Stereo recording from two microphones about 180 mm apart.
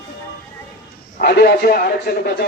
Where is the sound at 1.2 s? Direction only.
60° left (ahead or behind).